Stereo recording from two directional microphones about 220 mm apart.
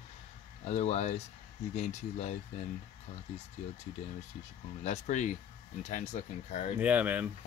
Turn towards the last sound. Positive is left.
turn(degrees=-5)  # may be behind; listen again after turning